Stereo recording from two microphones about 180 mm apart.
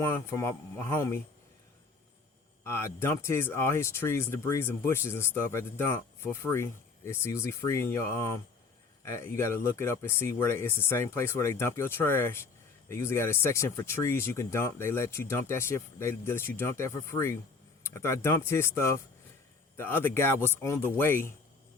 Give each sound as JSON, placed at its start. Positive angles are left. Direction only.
{"t": 0.0, "sound": "speech", "side_deg": 15}
{"t": 2.6, "sound": "speech", "side_deg": 15}